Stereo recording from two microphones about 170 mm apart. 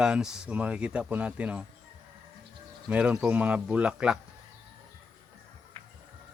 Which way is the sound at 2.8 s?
5° right (ahead or behind).